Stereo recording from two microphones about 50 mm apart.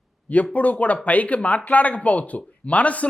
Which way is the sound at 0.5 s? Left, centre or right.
Left.